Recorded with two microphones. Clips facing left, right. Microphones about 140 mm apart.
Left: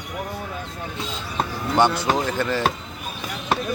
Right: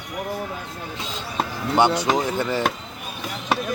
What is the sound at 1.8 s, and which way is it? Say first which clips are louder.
Speech: right 1 dB; 15° right (ahead or behind).